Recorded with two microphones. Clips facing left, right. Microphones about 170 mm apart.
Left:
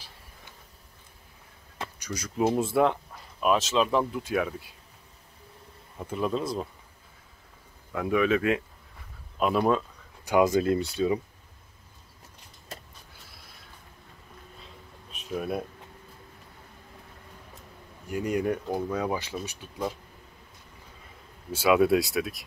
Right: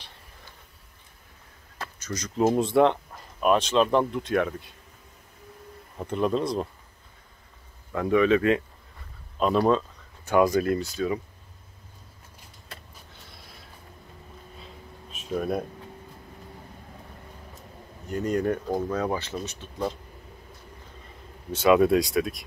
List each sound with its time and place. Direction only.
2.0 s speech: 10° left (ahead or behind)
6.0 s speech: 5° left (ahead or behind)
7.9 s speech: 5° left (ahead or behind); by 11.1 s 25° left (ahead or behind)
13.1 s a sound: centre (ahead or behind)
18.0 s speech: 10° left (ahead or behind)
21.5 s speech: 5° left (ahead or behind)